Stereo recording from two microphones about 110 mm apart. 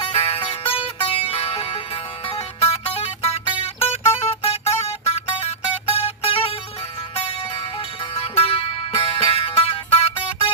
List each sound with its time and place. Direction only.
0.0 s music: 55° left (ahead or behind)
8.1 s music: 55° left (ahead or behind)